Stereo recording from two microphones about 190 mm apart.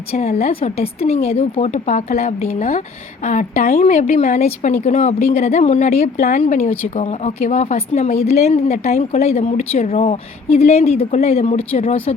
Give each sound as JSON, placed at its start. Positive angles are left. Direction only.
{"t": 0.1, "sound": "speech", "side_deg": 35}